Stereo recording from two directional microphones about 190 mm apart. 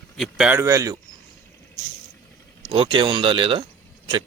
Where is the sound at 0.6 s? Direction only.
15° right (ahead or behind).